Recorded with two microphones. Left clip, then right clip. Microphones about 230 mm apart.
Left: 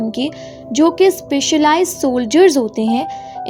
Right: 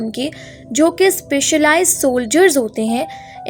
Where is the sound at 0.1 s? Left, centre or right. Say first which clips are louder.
Left 2 dB; left.